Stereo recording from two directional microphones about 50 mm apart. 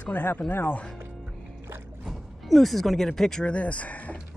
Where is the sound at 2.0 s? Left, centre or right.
Centre.